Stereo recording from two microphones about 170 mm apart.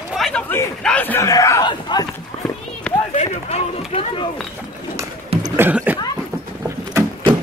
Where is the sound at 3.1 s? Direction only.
40° left (ahead or behind).